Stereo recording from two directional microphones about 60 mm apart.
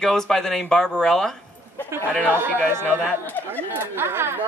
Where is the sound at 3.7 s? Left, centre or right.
Right.